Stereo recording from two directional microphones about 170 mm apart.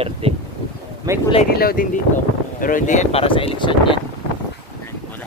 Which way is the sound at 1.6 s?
60° left (ahead or behind).